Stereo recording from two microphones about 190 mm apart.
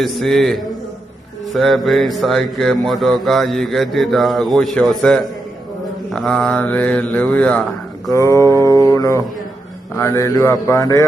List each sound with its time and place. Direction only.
0.0 s mantra: centre (ahead or behind); by 8.4 s 15° left (ahead or behind)
8.9 s speech: 15° left (ahead or behind)
9.9 s mantra: 15° left (ahead or behind)